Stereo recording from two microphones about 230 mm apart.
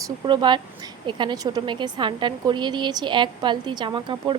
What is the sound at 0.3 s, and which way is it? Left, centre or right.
A woman's voice, centre.